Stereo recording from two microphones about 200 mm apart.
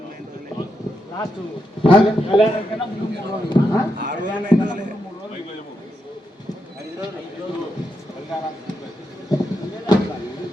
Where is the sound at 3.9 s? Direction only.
40° right (ahead or behind).